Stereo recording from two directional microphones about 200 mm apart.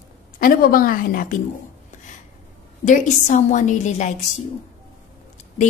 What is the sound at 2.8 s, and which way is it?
A woman's voice, 40° left (ahead or behind).